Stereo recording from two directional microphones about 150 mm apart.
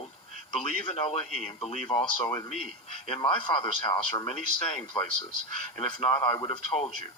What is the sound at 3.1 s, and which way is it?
A man's voice, 35° left (ahead or behind).